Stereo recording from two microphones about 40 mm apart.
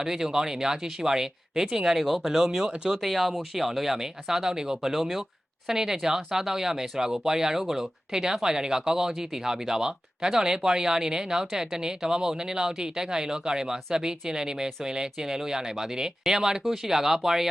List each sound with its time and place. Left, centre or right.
0.0 s speech: centre
2.6 s speech: right
3.0 s speech: centre